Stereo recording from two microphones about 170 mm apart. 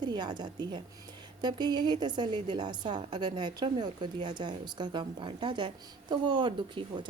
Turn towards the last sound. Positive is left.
turn(degrees=-25)  # may be behind; listen again after turning